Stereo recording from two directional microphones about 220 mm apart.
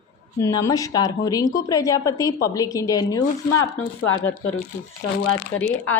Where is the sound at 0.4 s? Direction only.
15° left (ahead or behind).